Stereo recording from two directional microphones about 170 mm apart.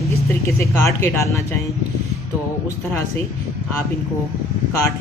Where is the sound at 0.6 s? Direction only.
15° left (ahead or behind).